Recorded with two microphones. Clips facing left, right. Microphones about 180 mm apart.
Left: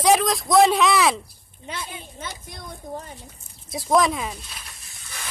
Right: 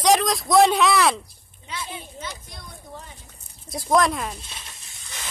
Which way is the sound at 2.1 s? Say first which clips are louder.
Even; 50° left (ahead or behind).